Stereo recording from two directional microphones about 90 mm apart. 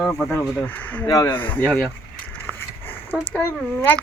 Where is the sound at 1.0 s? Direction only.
40° left (ahead or behind).